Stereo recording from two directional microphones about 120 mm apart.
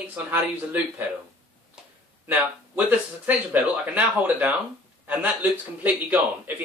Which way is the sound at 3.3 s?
15° right (ahead or behind).